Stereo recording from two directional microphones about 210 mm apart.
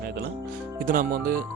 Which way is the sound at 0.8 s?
40° right (ahead or behind).